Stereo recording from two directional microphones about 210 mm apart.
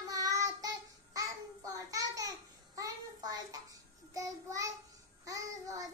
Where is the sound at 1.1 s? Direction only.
15° right (ahead or behind).